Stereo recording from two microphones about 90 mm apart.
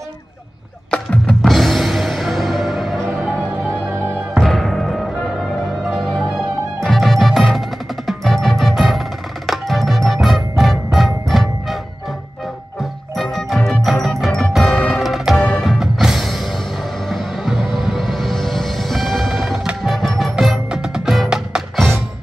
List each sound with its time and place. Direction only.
0.9 s music: 15° left (ahead or behind)
1.4 s music: centre (ahead or behind)
3.5 s music: 25° right (ahead or behind)
4.4 s music: centre (ahead or behind)
13.2 s music: 5° right (ahead or behind)
15.3 s music: 15° left (ahead or behind)
15.6 s music: 5° right (ahead or behind)